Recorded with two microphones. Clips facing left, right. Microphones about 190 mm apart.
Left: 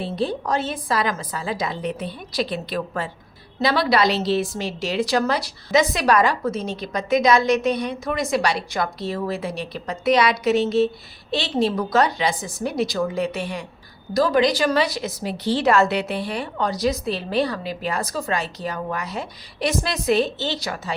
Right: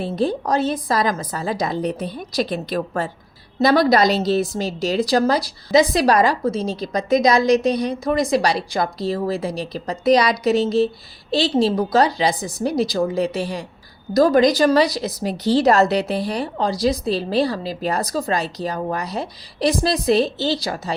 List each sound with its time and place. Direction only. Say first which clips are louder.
0.0 s a woman's voice: right 3 dB; 45° right (ahead or behind)